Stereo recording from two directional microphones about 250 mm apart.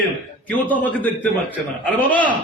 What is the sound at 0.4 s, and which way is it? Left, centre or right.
A man's voice, centre.